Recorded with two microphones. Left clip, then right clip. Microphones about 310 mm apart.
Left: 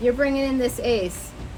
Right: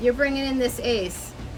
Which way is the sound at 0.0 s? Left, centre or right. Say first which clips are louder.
Left 1 dB; centre.